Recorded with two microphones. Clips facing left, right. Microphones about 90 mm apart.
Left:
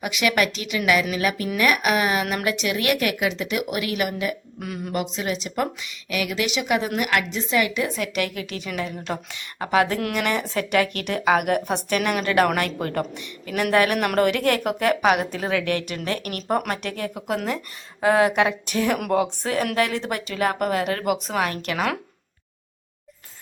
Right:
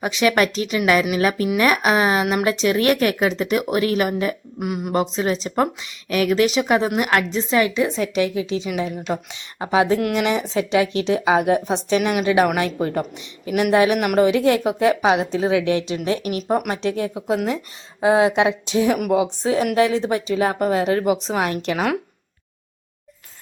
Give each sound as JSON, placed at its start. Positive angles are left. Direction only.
{"t": 0.0, "sound": "a woman's voice", "side_deg": -30}
{"t": 4.6, "sound": "a woman's voice", "side_deg": -20}
{"t": 4.9, "sound": "a woman's voice", "side_deg": -35}